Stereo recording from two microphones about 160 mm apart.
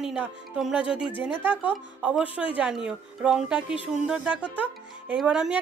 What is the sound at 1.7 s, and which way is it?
Speech, 5° right (ahead or behind).